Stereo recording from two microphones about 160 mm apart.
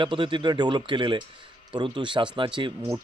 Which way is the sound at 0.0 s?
30° right (ahead or behind).